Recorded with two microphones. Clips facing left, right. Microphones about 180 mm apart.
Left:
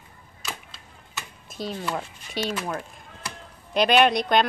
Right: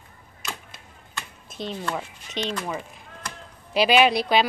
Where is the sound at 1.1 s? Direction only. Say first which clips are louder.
Even; 5° left (ahead or behind).